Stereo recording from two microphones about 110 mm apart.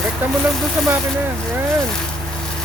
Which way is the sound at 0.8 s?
Centre (ahead or behind).